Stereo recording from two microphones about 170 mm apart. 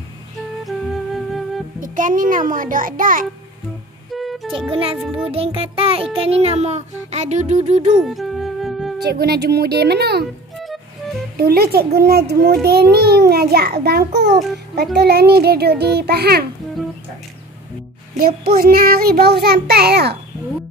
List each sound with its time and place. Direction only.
0.7 s music: centre (ahead or behind)
1.8 s a child's voice: 50° right (ahead or behind)
4.1 s music: centre (ahead or behind)
4.6 s music: 30° right (ahead or behind)
8.0 s music: centre (ahead or behind)
9.0 s a child's voice: 70° right (ahead or behind)
10.6 s music: centre (ahead or behind)
11.3 s a child's voice: 65° right (ahead or behind)
18.1 s child singing: 60° right (ahead or behind)